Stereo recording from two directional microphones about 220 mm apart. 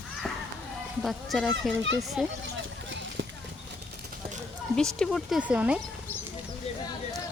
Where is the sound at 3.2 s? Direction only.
60° right (ahead or behind).